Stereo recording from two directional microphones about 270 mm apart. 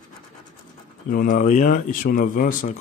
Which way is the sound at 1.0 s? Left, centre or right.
Left.